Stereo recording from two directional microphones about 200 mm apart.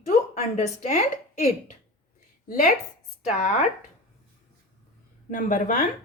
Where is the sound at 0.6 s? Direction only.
35° left (ahead or behind).